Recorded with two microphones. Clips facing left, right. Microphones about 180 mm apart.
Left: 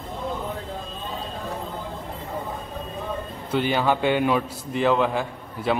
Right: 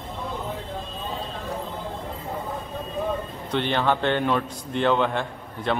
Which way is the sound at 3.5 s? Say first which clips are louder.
Left 1 dB; 5° left (ahead or behind).